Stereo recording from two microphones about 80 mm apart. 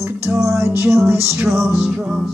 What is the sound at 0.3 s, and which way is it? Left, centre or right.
Music, right.